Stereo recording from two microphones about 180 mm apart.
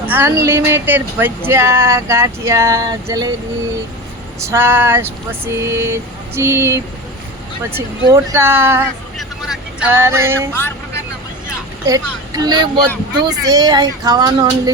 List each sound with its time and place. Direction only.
0.1 s speech: 15° right (ahead or behind)
4.4 s speech: 15° right (ahead or behind)
8.0 s speech: 15° right (ahead or behind)
10.5 s speech: 10° left (ahead or behind)
11.9 s speech: 20° right (ahead or behind)